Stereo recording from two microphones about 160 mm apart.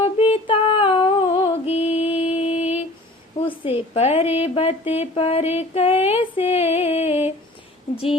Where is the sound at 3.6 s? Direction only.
40° left (ahead or behind).